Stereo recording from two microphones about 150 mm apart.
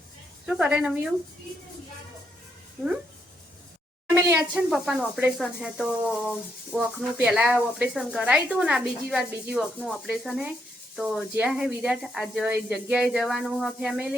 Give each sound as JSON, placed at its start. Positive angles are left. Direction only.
{"t": 0.4, "sound": "speech", "side_deg": -5}
{"t": 4.1, "sound": "a woman's voice", "side_deg": -20}
{"t": 4.5, "sound": "speech", "side_deg": -5}